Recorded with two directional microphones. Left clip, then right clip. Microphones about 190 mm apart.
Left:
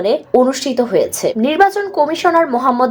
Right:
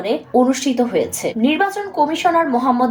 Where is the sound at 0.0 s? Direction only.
35° left (ahead or behind).